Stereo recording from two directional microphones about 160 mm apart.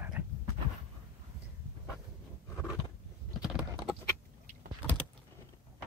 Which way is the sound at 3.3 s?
5° right (ahead or behind).